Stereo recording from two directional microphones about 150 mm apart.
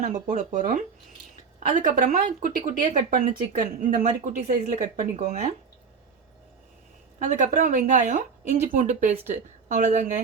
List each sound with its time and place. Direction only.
0.0 s speech: 60° right (ahead or behind)
7.2 s a woman's voice: 60° right (ahead or behind)